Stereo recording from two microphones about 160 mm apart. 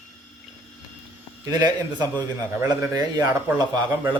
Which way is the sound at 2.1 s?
15° right (ahead or behind).